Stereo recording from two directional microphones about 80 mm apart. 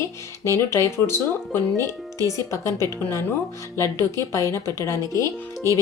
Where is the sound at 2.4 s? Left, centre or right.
Left.